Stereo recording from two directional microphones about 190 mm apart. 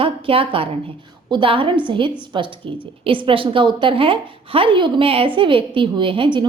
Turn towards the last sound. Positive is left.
turn(degrees=-25)  # may be behind; listen again after turning